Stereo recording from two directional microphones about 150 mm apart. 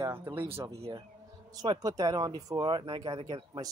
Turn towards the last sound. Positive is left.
turn(degrees=-30)  # may be behind; listen again after turning